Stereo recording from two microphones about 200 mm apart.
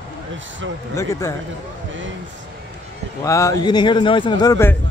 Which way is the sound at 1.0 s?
15° left (ahead or behind).